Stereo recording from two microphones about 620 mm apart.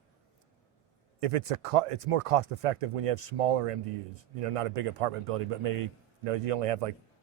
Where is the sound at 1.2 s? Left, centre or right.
Right.